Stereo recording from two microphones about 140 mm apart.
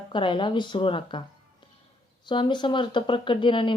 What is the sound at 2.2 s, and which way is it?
Speech, 35° left (ahead or behind).